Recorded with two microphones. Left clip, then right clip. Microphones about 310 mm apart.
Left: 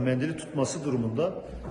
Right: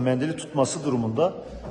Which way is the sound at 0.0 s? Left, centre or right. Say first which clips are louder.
Right 4 dB; centre.